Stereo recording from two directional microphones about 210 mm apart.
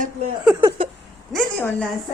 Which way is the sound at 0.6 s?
25° right (ahead or behind).